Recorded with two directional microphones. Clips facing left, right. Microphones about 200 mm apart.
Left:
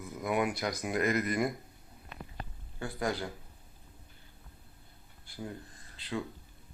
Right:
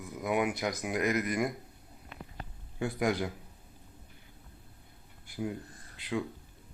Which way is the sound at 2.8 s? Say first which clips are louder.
Right 4 dB; 20° right (ahead or behind).